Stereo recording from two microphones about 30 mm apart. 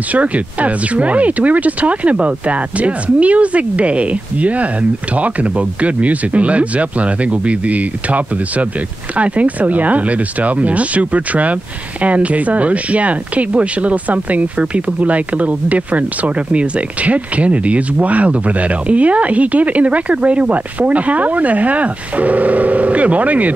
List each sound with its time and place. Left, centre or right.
0.1 s speech: right